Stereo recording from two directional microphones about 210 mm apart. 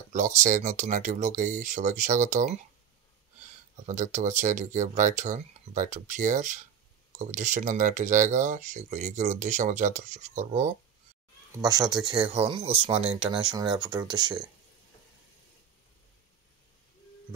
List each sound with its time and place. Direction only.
0.1 s speech: 35° right (ahead or behind)
3.8 s speech: 35° right (ahead or behind)
11.5 s speech: 20° right (ahead or behind)